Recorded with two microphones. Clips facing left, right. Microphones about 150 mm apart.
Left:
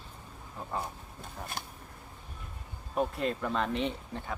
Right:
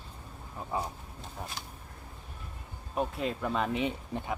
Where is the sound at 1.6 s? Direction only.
55° left (ahead or behind).